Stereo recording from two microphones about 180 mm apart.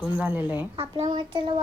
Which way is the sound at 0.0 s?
10° right (ahead or behind).